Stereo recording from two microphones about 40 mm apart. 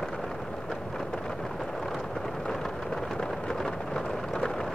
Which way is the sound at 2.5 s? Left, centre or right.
Centre.